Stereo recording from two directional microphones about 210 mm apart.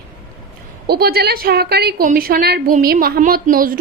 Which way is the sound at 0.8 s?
50° right (ahead or behind).